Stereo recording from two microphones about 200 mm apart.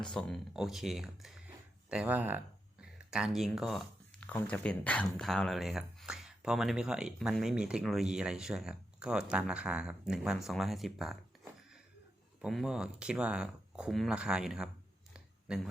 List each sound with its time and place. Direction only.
0.0 s speech: 5° left (ahead or behind)
12.4 s speech: centre (ahead or behind)
15.1 s a sound: 5° right (ahead or behind)